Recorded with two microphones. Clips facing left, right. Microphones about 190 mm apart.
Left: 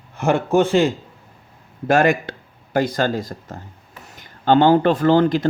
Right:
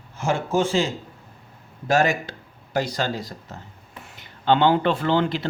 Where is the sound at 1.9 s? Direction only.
55° left (ahead or behind).